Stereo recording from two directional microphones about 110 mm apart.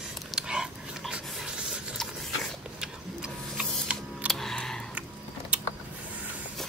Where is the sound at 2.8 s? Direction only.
5° right (ahead or behind).